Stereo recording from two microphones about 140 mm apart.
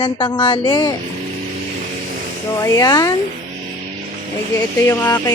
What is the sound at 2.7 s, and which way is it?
Speech, 25° left (ahead or behind).